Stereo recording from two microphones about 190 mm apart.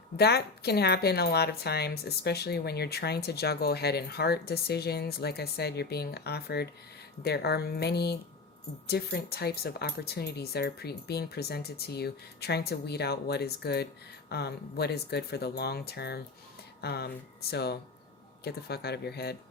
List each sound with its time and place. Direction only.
0.2 s speech: 60° left (ahead or behind)